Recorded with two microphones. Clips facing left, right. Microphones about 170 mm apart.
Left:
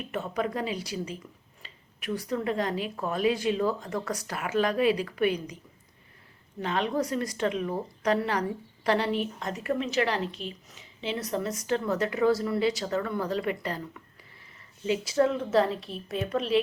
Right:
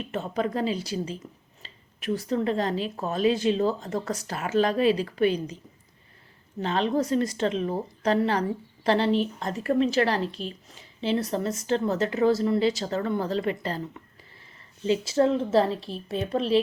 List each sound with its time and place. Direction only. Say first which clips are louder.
0.1 s a woman's voice: right 2 dB; 30° right (ahead or behind)
6.6 s a woman's voice: right 3 dB; 30° right (ahead or behind)